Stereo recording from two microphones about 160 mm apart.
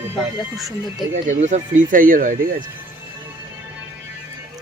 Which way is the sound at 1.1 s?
45° right (ahead or behind).